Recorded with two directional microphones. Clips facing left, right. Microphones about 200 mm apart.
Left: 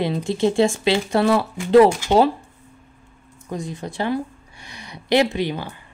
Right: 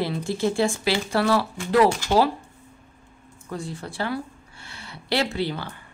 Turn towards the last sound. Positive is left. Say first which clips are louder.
# left 4 dB
turn(degrees=15)  # may be behind; listen again after turning